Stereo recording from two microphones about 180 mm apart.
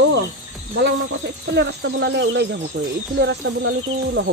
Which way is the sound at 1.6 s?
75° right (ahead or behind).